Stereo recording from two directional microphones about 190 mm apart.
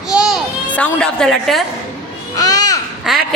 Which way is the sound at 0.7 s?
5° left (ahead or behind).